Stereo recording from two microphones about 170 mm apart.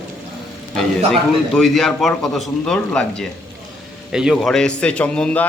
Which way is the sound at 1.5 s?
Centre (ahead or behind).